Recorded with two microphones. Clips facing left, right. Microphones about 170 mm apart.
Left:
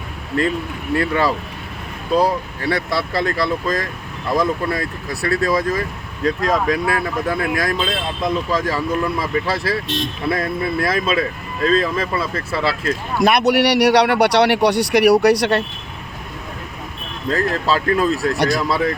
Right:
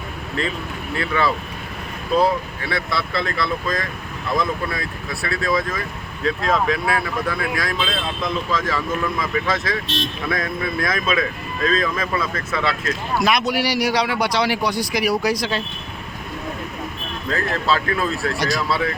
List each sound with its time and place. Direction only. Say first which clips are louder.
0.9 s speech: left 3 dB; 45° left (ahead or behind)
9.8 s speech: left 2 dB; 15° left (ahead or behind)
10.2 s speech: left 5 dB; 30° left (ahead or behind)
13.2 s a man's voice: left 7 dB; 65° left (ahead or behind)
17.2 s speech: left 3 dB; 35° left (ahead or behind)
18.3 s speech: left 4 dB; 55° left (ahead or behind)